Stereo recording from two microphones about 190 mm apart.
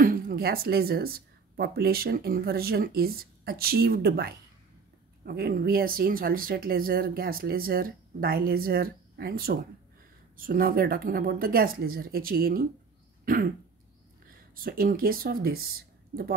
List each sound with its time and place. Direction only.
0.0 s speech: 50° right (ahead or behind)
13.2 s throat clearing: 50° right (ahead or behind)
14.5 s speech: 50° right (ahead or behind)